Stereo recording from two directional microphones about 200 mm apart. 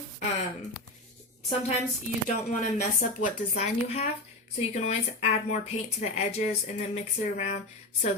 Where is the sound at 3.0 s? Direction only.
35° left (ahead or behind).